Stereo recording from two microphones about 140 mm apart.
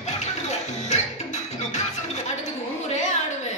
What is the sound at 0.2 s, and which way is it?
Music, 55° left (ahead or behind).